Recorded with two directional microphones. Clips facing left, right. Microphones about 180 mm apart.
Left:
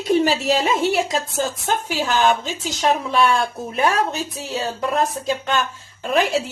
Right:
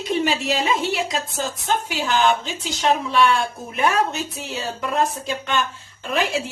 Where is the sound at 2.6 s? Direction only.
45° left (ahead or behind).